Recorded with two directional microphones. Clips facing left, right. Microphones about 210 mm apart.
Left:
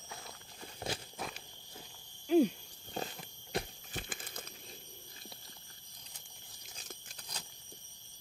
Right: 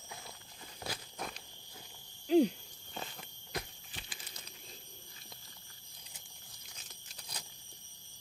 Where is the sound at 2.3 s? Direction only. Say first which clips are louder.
Even; 20° right (ahead or behind).